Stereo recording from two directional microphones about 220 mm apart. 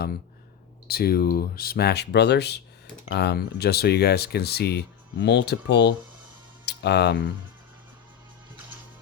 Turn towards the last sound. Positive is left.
turn(degrees=50)  # may be behind; listen again after turning